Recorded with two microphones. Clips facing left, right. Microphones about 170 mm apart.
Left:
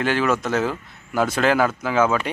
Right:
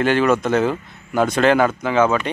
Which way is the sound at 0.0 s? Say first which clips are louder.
Right 4 dB; centre (ahead or behind).